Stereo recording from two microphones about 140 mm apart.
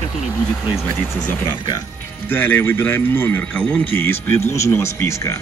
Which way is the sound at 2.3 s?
15° left (ahead or behind).